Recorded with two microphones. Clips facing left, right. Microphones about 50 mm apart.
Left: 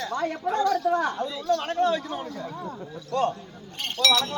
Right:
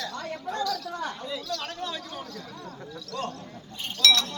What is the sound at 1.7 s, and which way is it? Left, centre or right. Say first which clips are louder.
Speech: left 12 dB; left.